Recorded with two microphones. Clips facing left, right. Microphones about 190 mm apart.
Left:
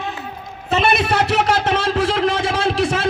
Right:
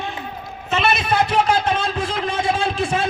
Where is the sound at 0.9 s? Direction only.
70° left (ahead or behind); by 3.1 s 85° left.